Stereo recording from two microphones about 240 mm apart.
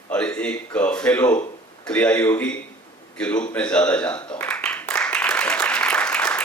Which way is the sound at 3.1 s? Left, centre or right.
Centre.